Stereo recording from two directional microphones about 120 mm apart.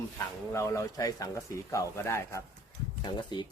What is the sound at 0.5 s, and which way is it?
Speech, 25° left (ahead or behind).